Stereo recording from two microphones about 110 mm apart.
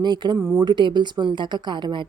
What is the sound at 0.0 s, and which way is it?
Speech, 40° right (ahead or behind).